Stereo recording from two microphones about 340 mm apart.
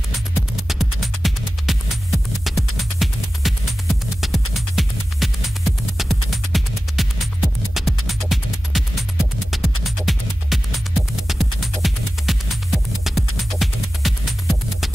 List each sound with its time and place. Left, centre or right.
0.6 s music: centre